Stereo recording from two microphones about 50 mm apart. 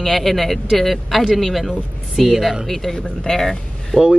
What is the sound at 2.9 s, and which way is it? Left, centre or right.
Speech, centre.